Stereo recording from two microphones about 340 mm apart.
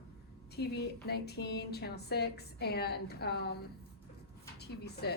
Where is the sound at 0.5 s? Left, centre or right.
Left.